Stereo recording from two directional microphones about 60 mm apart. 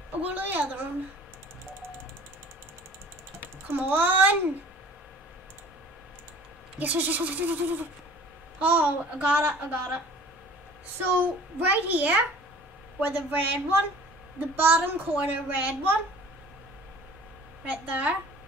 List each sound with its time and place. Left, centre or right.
0.3 s a child's voice: right
3.6 s a child's voice: right
6.8 s a child's voice: right
11.0 s a child's voice: right
17.6 s a child's voice: right